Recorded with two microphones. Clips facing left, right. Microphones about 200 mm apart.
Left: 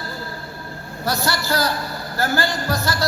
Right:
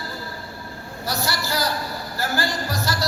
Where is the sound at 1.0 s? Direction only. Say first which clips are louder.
Left 4 dB; 55° left (ahead or behind).